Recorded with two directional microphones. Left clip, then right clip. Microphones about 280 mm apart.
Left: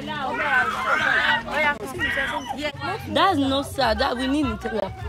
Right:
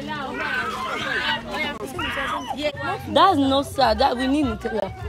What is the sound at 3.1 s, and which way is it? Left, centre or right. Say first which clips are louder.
A woman's voice: right 3 dB; centre.